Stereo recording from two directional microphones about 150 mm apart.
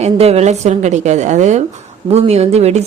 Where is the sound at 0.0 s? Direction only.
45° right (ahead or behind).